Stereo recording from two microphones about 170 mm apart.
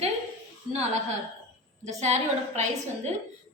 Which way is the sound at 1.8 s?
40° right (ahead or behind).